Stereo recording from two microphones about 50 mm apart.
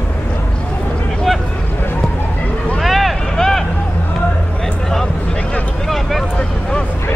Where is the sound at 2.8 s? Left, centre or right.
Centre.